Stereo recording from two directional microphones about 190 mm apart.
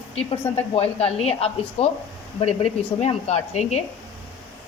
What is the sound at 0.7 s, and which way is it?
Speech, 30° left (ahead or behind).